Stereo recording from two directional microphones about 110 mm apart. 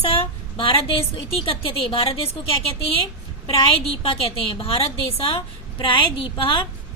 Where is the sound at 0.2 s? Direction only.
55° left (ahead or behind).